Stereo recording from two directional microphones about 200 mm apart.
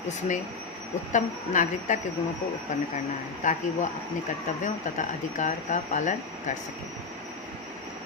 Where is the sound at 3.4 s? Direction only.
40° left (ahead or behind).